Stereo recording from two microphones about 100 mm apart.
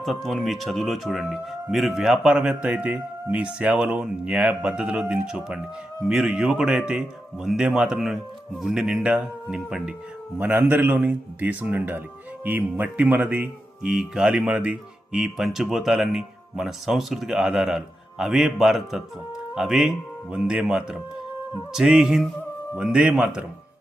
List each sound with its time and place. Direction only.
0.0 s speech: centre (ahead or behind); by 23.5 s 15° right (ahead or behind)